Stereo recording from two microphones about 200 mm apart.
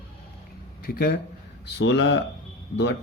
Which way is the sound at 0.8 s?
50° left (ahead or behind).